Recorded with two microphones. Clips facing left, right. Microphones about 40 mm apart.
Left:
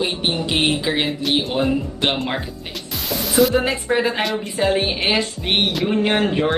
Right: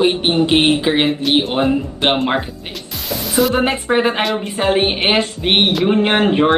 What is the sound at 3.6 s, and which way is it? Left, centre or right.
Speech, right.